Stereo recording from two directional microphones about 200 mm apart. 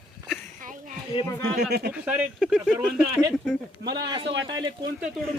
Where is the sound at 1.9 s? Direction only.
5° right (ahead or behind).